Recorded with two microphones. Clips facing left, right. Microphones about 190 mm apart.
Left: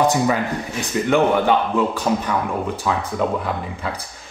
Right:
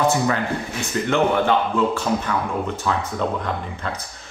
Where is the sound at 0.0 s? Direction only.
15° left (ahead or behind).